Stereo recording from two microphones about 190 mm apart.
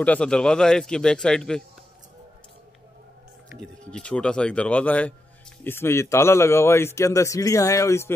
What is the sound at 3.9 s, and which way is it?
A man's voice, 5° left (ahead or behind).